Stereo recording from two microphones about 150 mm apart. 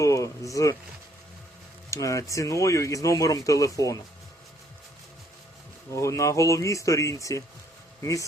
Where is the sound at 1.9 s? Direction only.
20° left (ahead or behind).